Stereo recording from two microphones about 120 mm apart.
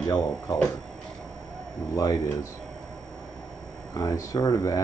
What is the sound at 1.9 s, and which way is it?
Speech, 30° left (ahead or behind).